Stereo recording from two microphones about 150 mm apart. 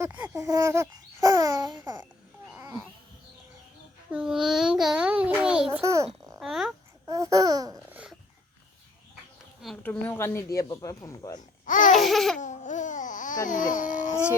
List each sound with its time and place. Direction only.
0.0 s speech: 10° right (ahead or behind)
0.3 s babbling: 20° right (ahead or behind)
4.1 s child singing: 5° right (ahead or behind)
5.8 s a sound: 20° right (ahead or behind)
6.4 s a sound: 5° right (ahead or behind)
7.1 s babbling: 20° right (ahead or behind)
7.9 s a sound: 10° right (ahead or behind)
9.8 s speech: 10° left (ahead or behind)
11.3 s babbling: 60° left (ahead or behind)
11.9 s laughter: centre (ahead or behind)
12.4 s babbling: 55° left (ahead or behind)